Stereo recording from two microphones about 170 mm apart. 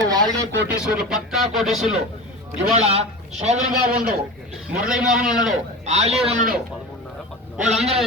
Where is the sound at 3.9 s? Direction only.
60° right (ahead or behind).